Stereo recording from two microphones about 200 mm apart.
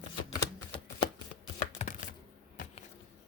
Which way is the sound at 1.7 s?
40° left (ahead or behind).